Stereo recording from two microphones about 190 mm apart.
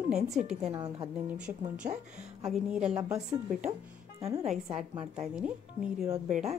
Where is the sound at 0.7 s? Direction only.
25° right (ahead or behind).